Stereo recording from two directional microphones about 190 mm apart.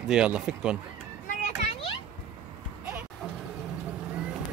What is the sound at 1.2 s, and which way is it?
Children playing, 40° left (ahead or behind).